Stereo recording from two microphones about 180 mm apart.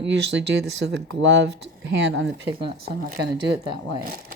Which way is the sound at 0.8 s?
70° right (ahead or behind).